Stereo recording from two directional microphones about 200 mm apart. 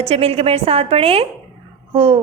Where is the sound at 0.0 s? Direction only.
30° right (ahead or behind).